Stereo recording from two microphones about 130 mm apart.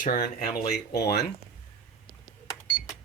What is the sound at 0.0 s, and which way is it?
Speech, 90° left.